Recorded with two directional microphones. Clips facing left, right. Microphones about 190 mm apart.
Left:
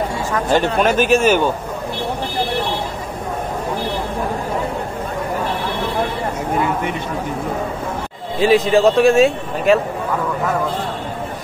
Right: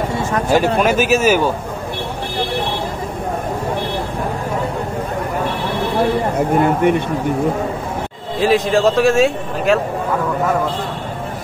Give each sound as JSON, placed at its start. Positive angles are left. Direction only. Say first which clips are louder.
{"t": 0.5, "sound": "speech", "louder": "right 1 dB", "side_deg": -10}
{"t": 6.3, "sound": "speech", "louder": "right 5 dB", "side_deg": -55}
{"t": 8.4, "sound": "a man's voice", "louder": "left 1 dB", "side_deg": 0}